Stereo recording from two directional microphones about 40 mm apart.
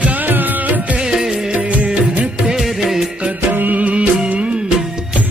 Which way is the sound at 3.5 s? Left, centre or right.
Right.